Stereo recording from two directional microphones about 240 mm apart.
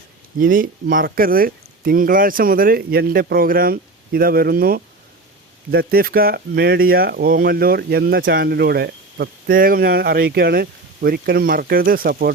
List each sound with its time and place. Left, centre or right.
0.3 s speech: right